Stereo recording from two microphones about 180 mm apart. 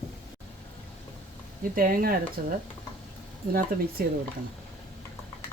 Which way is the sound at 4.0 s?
60° right (ahead or behind).